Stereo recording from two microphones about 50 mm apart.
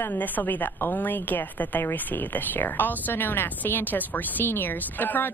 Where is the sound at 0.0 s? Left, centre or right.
Left.